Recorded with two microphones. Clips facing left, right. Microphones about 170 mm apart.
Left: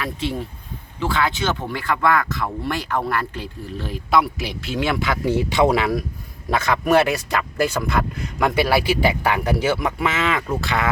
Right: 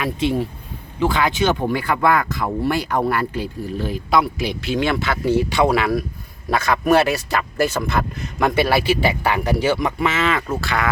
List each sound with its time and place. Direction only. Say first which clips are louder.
0.0 s speech: right 5 dB; 15° right (ahead or behind); by 7.3 s 20° left (ahead or behind)
8.5 s speech: right 1 dB; 15° left (ahead or behind)